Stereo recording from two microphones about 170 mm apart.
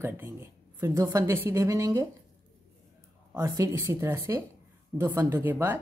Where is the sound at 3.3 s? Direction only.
20° right (ahead or behind).